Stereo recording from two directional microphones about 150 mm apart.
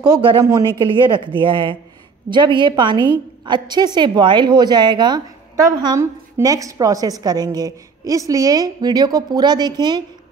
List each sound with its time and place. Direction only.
0.0 s a woman's voice: 30° right (ahead or behind)